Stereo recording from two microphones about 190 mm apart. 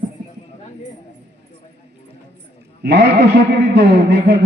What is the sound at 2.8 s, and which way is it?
Speech, 60° right (ahead or behind).